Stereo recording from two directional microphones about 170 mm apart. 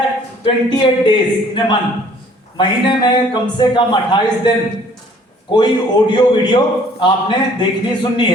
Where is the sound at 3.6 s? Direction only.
25° left (ahead or behind).